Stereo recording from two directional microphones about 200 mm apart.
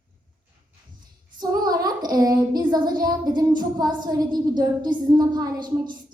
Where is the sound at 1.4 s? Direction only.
20° right (ahead or behind).